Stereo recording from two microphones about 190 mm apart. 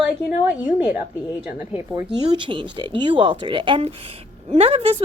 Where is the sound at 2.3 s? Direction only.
25° right (ahead or behind).